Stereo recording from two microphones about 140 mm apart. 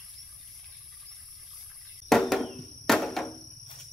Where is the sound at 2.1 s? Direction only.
Centre (ahead or behind).